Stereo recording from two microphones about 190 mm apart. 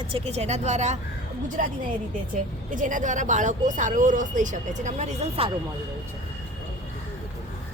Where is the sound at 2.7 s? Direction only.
45° right (ahead or behind).